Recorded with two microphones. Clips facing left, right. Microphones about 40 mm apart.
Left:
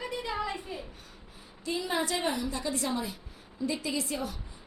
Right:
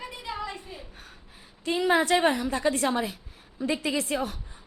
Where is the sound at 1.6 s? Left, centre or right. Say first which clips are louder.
Right 7 dB; right.